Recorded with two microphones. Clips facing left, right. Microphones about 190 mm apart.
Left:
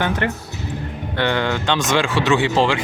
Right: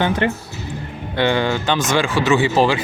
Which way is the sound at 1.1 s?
10° right (ahead or behind).